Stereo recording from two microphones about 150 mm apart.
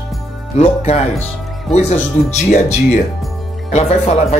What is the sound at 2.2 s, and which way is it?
Speech, 60° left (ahead or behind).